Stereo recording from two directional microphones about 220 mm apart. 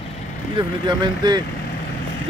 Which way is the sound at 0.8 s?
20° right (ahead or behind).